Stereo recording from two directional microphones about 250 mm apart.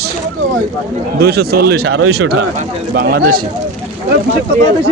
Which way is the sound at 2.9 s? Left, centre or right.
Right.